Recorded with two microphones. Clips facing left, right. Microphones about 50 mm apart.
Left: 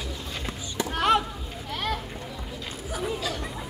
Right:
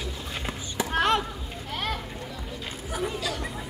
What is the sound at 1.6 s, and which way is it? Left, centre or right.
Children playing, centre.